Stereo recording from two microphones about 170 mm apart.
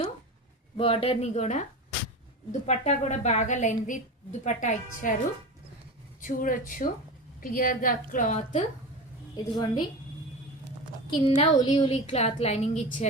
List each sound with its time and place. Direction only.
0.8 s a woman's voice: 35° left (ahead or behind)
6.2 s a woman's voice: 55° left (ahead or behind)
9.3 s a woman's voice: 20° left (ahead or behind)
11.1 s a woman's voice: 30° left (ahead or behind)
12.1 s a woman's voice: 40° left (ahead or behind)